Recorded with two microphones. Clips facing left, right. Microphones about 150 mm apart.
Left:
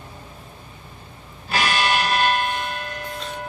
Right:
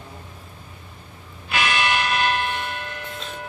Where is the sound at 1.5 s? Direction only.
35° left (ahead or behind).